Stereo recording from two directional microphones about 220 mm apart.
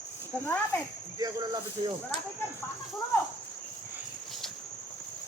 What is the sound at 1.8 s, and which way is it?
Speech, 20° right (ahead or behind).